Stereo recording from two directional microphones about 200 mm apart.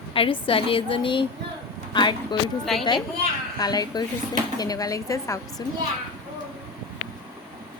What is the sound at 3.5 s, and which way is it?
A woman's voice, 20° left (ahead or behind).